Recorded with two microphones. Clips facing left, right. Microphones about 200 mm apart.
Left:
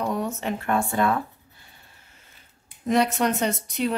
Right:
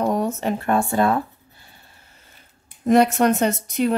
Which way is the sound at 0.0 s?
45° right (ahead or behind).